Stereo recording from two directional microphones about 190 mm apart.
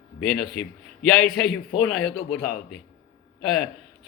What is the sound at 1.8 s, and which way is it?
Speech, 5° left (ahead or behind).